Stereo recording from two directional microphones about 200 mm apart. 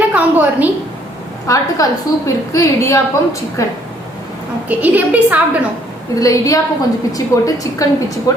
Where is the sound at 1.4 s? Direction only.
15° left (ahead or behind).